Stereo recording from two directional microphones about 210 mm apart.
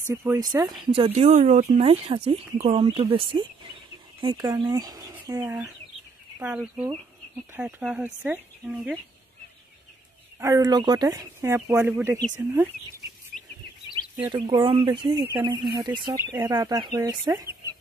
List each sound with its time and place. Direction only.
0.1 s speech: 15° right (ahead or behind)
10.4 s speech: 15° right (ahead or behind)
14.2 s speech: 20° right (ahead or behind)